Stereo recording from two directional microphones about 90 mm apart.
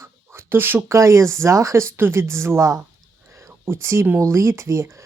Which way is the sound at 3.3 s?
30° right (ahead or behind).